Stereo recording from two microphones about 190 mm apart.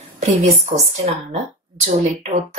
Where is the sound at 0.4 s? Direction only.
35° right (ahead or behind).